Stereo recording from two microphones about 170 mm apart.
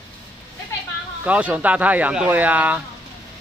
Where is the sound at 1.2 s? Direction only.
10° right (ahead or behind).